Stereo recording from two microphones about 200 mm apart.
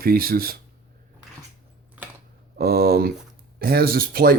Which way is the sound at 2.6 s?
50° right (ahead or behind).